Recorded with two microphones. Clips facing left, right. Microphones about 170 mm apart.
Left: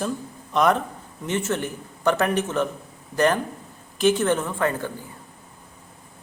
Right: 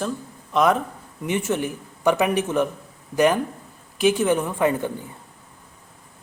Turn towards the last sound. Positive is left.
turn(degrees=-15)  # may be behind; listen again after turning